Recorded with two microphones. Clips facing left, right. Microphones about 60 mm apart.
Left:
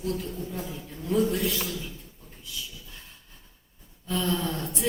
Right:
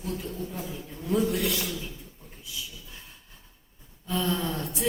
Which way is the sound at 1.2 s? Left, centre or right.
Right.